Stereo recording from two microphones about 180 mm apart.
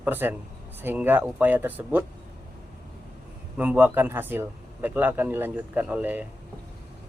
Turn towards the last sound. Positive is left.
turn(degrees=-10)  # may be behind; listen again after turning